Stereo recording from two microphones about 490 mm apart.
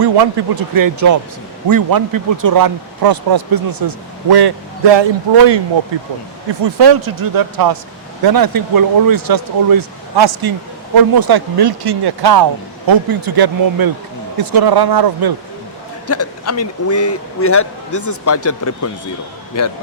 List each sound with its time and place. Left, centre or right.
0.0 s speech: right
6.5 s speech: right
16.0 s speech: left